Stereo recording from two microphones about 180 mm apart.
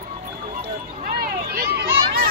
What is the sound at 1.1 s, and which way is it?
Run, 60° right (ahead or behind).